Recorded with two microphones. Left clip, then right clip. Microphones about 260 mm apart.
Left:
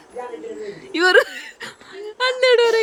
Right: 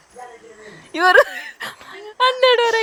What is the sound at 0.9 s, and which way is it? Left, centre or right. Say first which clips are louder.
Speech: right 2 dB; centre.